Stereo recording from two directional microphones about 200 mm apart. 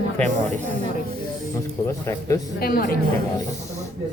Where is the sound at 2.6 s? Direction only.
45° left (ahead or behind).